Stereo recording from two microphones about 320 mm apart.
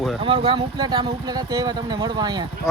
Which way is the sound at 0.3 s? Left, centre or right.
Centre.